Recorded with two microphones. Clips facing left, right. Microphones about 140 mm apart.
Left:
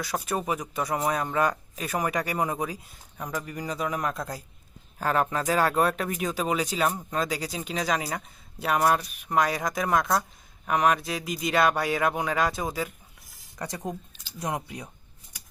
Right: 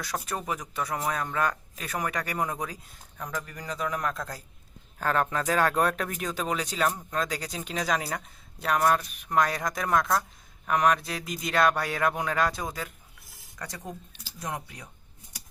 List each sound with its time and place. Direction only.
0.0 s speech: 5° left (ahead or behind)
13.6 s speech: 20° left (ahead or behind)